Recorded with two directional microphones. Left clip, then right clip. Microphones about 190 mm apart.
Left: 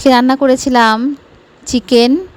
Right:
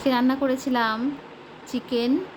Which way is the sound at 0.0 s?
55° left (ahead or behind).